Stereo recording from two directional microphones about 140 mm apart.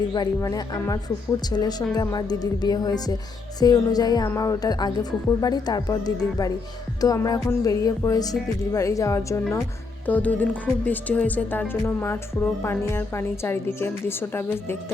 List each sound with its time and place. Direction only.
0.1 s speech: 30° left (ahead or behind)